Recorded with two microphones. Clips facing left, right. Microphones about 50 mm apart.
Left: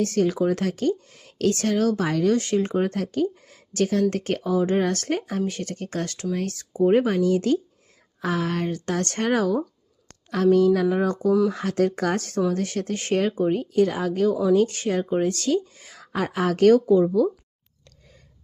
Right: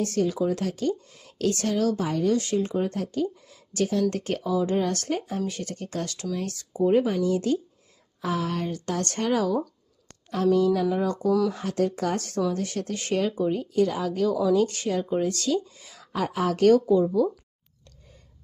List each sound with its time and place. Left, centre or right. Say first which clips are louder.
0.0 s speech: left 3 dB; left
2.0 s speech: left 3 dB; left
11.3 s speech: left 3 dB; left
11.5 s speech: left 3 dB; left